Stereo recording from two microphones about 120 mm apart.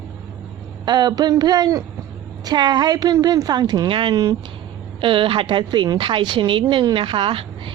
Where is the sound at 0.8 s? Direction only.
35° right (ahead or behind).